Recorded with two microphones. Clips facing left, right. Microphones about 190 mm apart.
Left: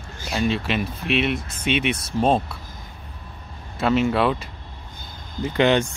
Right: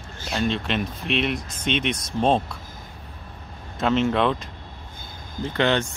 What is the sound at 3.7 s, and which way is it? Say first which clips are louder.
Speech: left 1 dB; 5° left (ahead or behind).